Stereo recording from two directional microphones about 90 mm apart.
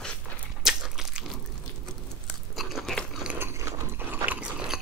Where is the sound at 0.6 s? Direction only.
5° right (ahead or behind).